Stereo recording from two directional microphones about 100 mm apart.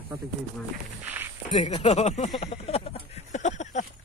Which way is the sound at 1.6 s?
90° left.